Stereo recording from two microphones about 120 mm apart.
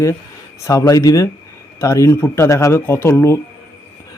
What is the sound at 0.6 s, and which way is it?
Speech, 30° left (ahead or behind).